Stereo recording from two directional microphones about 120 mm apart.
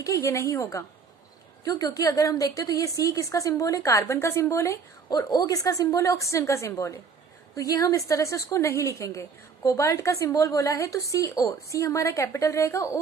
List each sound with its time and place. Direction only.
0.0 s a woman's voice: 25° left (ahead or behind)